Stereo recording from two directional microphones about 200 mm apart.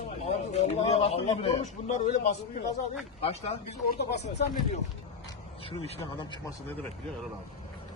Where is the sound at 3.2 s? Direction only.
30° left (ahead or behind).